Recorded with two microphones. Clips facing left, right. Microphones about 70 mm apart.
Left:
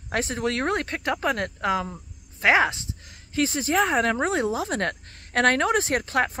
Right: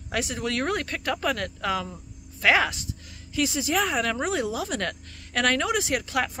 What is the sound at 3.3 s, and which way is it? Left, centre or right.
Speech, left.